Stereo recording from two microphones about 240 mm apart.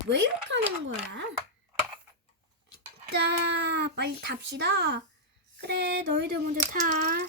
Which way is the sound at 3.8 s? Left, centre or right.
Right.